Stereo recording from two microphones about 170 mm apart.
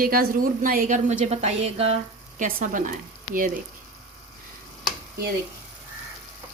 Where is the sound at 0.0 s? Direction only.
60° right (ahead or behind); by 2.0 s 40° right (ahead or behind).